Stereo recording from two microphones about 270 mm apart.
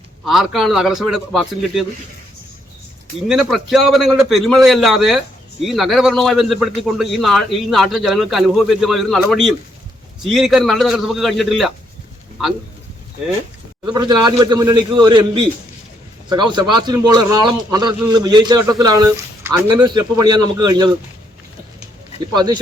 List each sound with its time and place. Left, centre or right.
0.3 s a man's voice: centre
3.2 s a man's voice: centre
13.8 s a man's voice: centre
22.4 s a man's voice: centre